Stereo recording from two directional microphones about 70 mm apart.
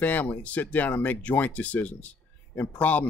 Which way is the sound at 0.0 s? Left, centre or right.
Left.